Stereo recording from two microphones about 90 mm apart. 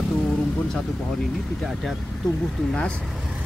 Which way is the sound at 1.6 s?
Centre (ahead or behind).